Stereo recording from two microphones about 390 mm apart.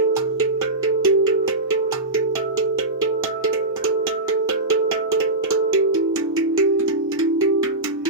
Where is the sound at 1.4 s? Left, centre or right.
Right.